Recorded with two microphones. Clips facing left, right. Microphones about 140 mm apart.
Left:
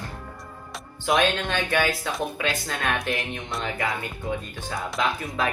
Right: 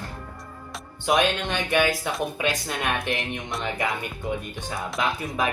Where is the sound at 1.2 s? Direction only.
15° right (ahead or behind).